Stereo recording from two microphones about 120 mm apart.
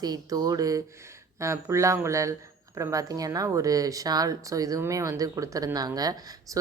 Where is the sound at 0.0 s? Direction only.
35° right (ahead or behind).